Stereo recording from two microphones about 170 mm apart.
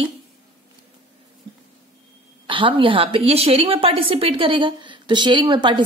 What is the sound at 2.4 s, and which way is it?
A woman's voice, 30° right (ahead or behind).